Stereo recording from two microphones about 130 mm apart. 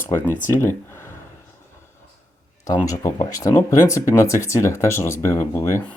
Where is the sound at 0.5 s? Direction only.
20° left (ahead or behind).